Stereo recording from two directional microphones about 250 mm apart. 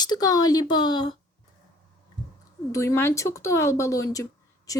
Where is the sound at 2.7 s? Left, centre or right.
Centre.